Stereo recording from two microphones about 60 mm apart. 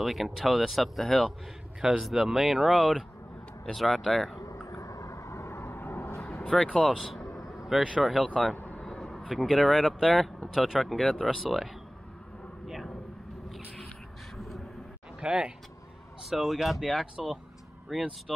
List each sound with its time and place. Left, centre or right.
0.0 s speech: centre
4.6 s vehicle: left
6.1 s vehicle: centre
8.0 s speech: centre
8.5 s vehicle: left
8.8 s a sound: centre
9.3 s speech: centre
9.7 s speech: centre
12.6 s a sound: centre
15.1 s speech: centre